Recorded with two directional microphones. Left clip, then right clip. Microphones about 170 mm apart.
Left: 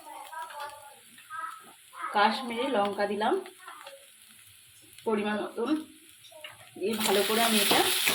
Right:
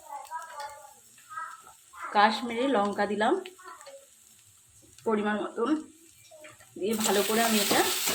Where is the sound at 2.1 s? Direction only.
15° right (ahead or behind).